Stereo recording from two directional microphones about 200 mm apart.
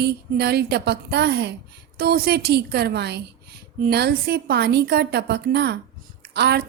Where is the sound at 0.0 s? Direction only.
55° right (ahead or behind).